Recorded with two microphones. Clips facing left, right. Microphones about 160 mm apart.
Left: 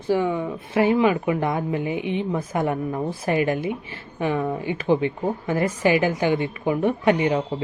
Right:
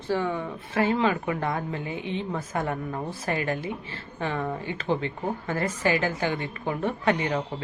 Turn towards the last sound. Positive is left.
turn(degrees=15)  # may be behind; listen again after turning